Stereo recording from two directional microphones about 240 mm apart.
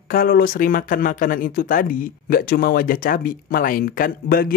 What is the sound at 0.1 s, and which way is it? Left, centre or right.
Speech, left.